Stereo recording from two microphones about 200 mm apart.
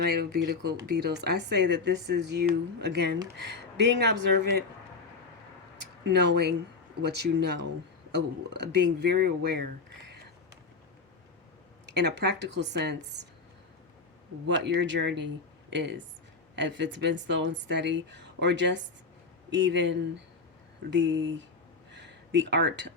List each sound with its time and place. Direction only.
0.0 s speech: 50° right (ahead or behind)
6.1 s speech: 55° right (ahead or behind)
11.9 s speech: 60° right (ahead or behind)
14.4 s speech: 65° right (ahead or behind)
21.9 s a sound: 60° right (ahead or behind)